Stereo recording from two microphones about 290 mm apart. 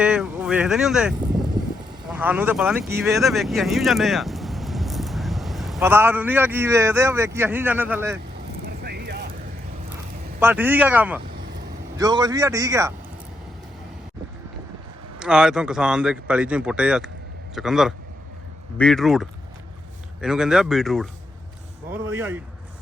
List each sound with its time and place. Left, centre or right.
0.0 s speech: centre
8.6 s vehicle: right
10.4 s a man's voice: centre
15.2 s a man's voice: centre